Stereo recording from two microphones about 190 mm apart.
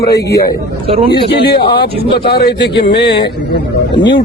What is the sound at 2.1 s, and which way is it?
Speech, 55° left (ahead or behind).